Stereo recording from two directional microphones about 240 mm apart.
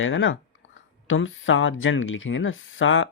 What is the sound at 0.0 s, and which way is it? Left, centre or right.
Speech, left.